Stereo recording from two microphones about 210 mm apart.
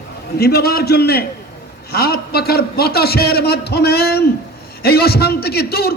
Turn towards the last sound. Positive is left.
turn(degrees=50)  # may be behind; listen again after turning